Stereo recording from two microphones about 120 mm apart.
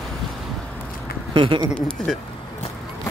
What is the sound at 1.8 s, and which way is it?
Speech, 5° left (ahead or behind).